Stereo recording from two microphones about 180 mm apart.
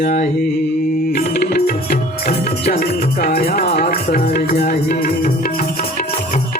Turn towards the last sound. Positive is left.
turn(degrees=60)  # may be behind; listen again after turning